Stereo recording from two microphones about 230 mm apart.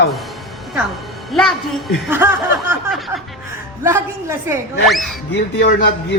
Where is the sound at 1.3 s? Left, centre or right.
Centre.